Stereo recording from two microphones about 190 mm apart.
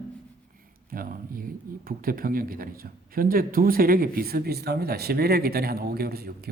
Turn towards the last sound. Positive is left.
turn(degrees=-55)  # may be behind; listen again after turning